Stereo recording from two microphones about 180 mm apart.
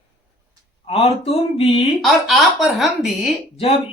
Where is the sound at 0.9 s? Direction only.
35° left (ahead or behind).